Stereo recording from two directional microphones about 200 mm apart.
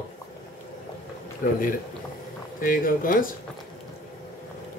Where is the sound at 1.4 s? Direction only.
45° left (ahead or behind).